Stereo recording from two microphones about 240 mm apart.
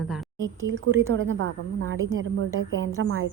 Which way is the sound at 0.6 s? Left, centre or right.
Right.